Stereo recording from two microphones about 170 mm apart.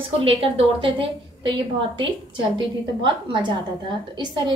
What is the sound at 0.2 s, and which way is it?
A woman's voice, 30° right (ahead or behind).